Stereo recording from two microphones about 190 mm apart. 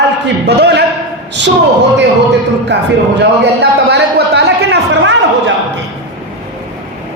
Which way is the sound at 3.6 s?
65° right (ahead or behind).